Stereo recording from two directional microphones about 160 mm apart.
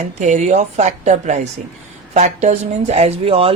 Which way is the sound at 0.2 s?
50° right (ahead or behind).